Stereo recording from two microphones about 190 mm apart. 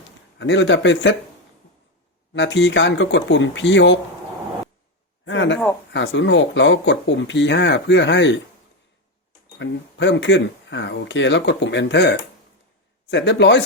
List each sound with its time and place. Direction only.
0.3 s speech: 70° left (ahead or behind)
2.3 s speech: 70° left (ahead or behind)
5.2 s speech: 75° left (ahead or behind)
9.6 s speech: 70° left (ahead or behind)